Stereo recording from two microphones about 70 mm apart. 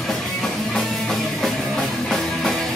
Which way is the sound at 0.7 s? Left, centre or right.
Centre.